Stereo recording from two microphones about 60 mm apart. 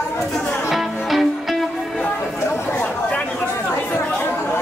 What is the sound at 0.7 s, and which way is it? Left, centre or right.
Music, centre.